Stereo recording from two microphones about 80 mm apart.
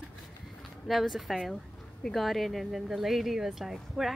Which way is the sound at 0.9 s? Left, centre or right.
Centre.